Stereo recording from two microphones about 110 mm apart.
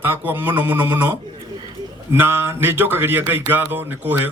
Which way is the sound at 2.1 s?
20° right (ahead or behind).